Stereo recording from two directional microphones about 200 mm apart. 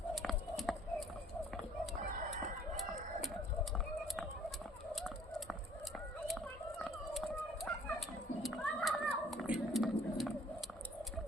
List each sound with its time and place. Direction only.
0.1 s run: centre (ahead or behind)
4.9 s fowl: centre (ahead or behind)
6.2 s turkey: centre (ahead or behind)